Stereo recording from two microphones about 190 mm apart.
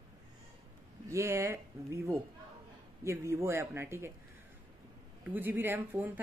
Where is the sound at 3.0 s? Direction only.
15° right (ahead or behind).